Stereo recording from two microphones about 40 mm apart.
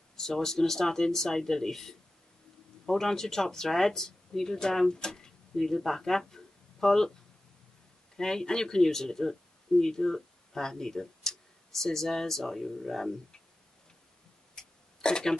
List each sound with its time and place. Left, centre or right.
0.1 s speech: centre
8.2 s speech: centre
14.5 s a sound: centre